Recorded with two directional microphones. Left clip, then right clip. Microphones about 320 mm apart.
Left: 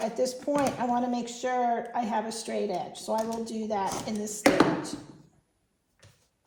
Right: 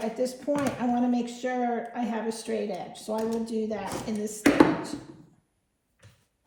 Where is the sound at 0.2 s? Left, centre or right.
Left.